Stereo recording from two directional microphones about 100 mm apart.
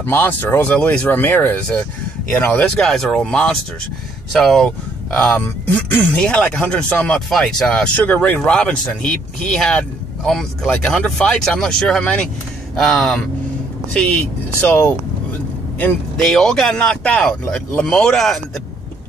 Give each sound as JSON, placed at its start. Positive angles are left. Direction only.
{"t": 0.0, "sound": "speech", "side_deg": 20}
{"t": 2.6, "sound": "speech", "side_deg": 10}
{"t": 5.4, "sound": "speech", "side_deg": 20}
{"t": 16.2, "sound": "speech", "side_deg": 5}